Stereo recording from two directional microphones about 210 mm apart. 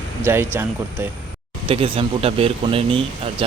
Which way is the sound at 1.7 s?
25° right (ahead or behind).